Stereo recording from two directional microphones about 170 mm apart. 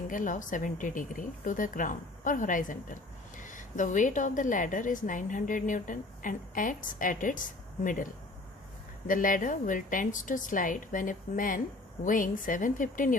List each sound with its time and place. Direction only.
0.1 s a woman's voice: 50° left (ahead or behind)
9.0 s a woman's voice: 50° left (ahead or behind)